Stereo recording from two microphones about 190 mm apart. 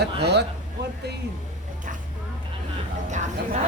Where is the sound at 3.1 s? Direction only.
40° right (ahead or behind).